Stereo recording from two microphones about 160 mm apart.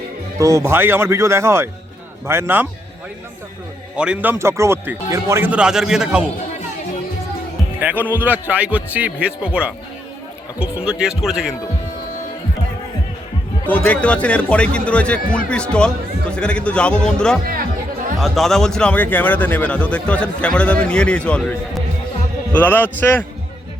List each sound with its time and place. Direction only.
0.3 s speech: 20° right (ahead or behind)
3.9 s speech: 5° right (ahead or behind)
7.8 s a man's voice: 10° right (ahead or behind)
13.7 s a man's voice: 10° left (ahead or behind)
17.4 s speech: 65° right (ahead or behind)
18.2 s speech: centre (ahead or behind)